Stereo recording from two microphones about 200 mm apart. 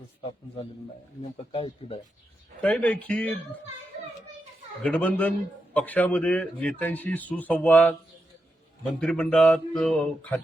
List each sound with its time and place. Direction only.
0.3 s a man's voice: 25° left (ahead or behind)
2.6 s speech: 5° left (ahead or behind)
4.8 s speech: 5° left (ahead or behind)
9.0 s speech: 5° left (ahead or behind)